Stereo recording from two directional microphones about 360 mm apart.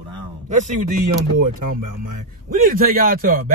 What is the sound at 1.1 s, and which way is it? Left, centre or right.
Speech, right.